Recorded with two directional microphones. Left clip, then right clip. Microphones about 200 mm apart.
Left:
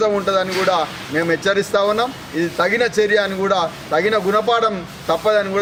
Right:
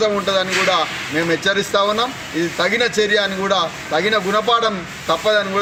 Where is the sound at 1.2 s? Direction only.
30° left (ahead or behind).